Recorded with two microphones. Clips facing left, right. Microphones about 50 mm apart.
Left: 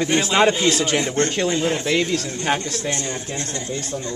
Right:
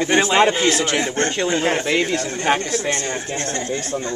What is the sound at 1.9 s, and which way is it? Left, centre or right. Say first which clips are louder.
Speech: right 1 dB; centre.